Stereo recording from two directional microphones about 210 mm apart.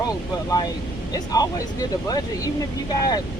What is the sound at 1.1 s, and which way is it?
Speech, 15° left (ahead or behind).